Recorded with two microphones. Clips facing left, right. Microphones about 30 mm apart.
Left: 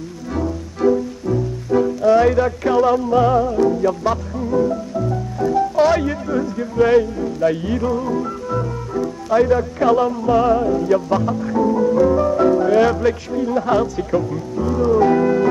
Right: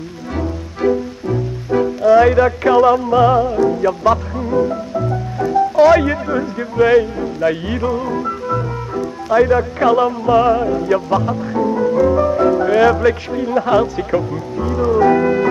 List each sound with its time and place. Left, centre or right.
0.3 s music: right
13.3 s speech: right